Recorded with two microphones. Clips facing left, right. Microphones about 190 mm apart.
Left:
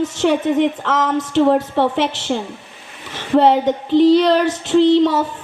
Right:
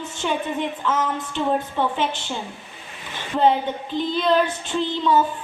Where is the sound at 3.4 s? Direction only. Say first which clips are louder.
Left 5 dB; 80° left.